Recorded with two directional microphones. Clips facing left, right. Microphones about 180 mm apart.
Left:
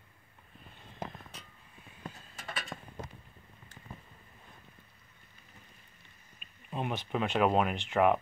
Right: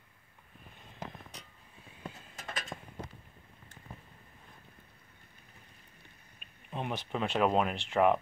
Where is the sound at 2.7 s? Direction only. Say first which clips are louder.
Even; 10° right (ahead or behind).